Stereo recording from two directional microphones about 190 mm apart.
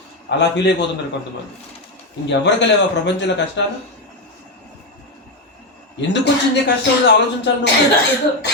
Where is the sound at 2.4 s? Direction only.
65° left (ahead or behind).